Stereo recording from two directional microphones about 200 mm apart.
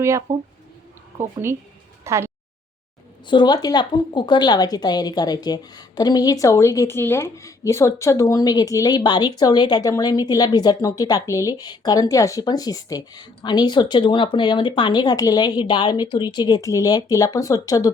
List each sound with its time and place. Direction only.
0.3 s speech: 15° right (ahead or behind)
2.0 s a sound: 15° right (ahead or behind)
3.2 s a woman's voice: 20° left (ahead or behind)